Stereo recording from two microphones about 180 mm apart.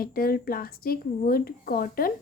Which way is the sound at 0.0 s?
55° left (ahead or behind).